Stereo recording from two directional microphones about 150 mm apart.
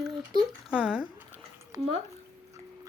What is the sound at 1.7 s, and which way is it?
Speech, 20° right (ahead or behind).